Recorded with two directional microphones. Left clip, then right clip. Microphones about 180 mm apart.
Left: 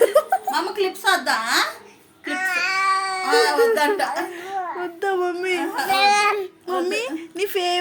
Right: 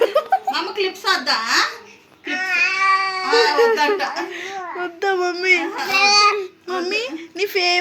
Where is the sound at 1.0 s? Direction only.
45° left (ahead or behind).